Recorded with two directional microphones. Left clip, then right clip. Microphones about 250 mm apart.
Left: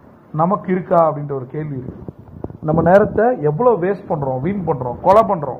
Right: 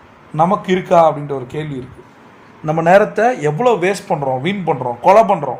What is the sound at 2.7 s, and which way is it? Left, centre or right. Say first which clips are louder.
Speech: right 1 dB; centre.